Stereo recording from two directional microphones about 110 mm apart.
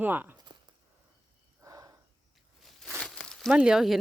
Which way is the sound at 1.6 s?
30° right (ahead or behind).